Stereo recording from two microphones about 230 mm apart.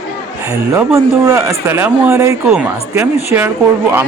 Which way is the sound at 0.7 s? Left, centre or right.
Centre.